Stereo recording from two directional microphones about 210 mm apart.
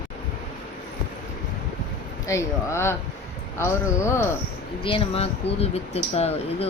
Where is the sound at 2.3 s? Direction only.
15° left (ahead or behind).